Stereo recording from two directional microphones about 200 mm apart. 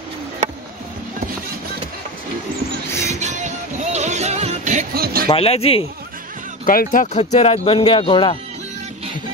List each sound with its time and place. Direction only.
2.9 s music: 15° left (ahead or behind)
3.2 s music: 35° right (ahead or behind)
5.3 s speech: 30° left (ahead or behind)
6.6 s speech: 45° left (ahead or behind)
7.2 s speech: 30° left (ahead or behind)